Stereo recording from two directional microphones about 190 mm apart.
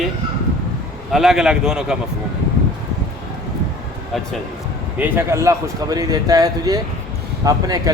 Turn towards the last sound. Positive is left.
turn(degrees=-20)  # may be behind; listen again after turning